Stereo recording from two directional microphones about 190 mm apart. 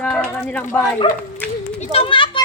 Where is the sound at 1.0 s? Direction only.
25° left (ahead or behind).